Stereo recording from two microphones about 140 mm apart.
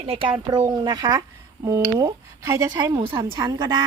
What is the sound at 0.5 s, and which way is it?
Speech, 30° right (ahead or behind).